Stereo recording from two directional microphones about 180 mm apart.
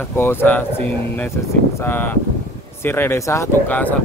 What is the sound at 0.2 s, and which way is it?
Speech, 10° left (ahead or behind).